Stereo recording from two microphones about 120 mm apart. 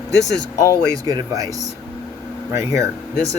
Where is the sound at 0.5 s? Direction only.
25° left (ahead or behind).